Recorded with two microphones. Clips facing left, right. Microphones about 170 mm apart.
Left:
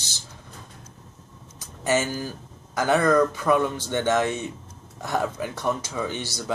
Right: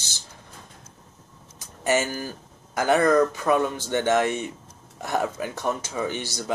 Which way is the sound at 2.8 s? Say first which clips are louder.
Right 1 dB; 20° right (ahead or behind).